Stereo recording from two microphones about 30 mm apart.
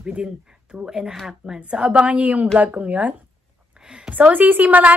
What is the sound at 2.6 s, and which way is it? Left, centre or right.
Speech, right.